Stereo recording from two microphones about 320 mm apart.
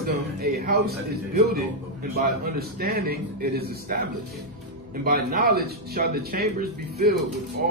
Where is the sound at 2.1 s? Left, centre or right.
Right.